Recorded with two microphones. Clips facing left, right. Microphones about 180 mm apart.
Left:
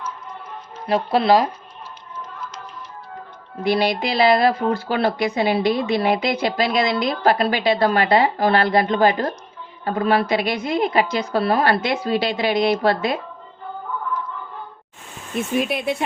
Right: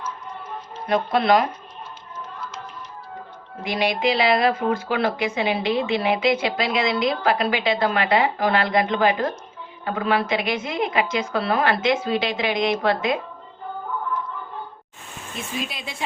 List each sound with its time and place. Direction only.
0.9 s speech: 30° left (ahead or behind)
3.6 s speech: 35° left (ahead or behind)
15.4 s speech: 60° left (ahead or behind)